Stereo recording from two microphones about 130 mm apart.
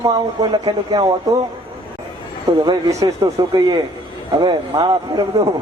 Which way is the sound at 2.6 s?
30° right (ahead or behind).